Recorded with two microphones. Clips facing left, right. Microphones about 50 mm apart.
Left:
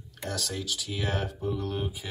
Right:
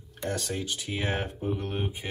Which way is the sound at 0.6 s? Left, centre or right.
Right.